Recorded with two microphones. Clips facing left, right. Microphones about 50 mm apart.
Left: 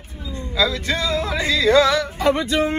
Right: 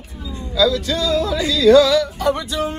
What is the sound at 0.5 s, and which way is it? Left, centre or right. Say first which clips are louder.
Yodeling: right 4 dB; left.